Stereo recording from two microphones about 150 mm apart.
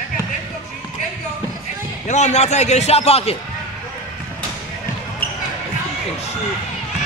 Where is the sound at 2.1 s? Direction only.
50° left (ahead or behind).